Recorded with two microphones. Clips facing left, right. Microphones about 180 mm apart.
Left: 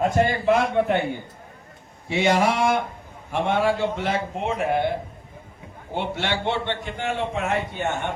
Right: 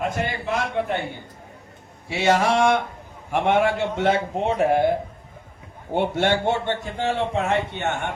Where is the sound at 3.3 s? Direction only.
15° right (ahead or behind); by 4.8 s 35° right (ahead or behind).